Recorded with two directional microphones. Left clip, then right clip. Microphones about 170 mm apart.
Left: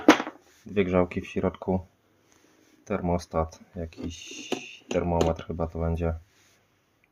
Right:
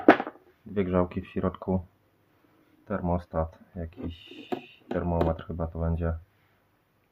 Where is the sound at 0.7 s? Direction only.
10° left (ahead or behind).